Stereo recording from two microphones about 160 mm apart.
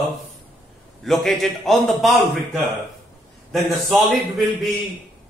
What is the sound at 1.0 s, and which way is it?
A man's voice, centre (ahead or behind).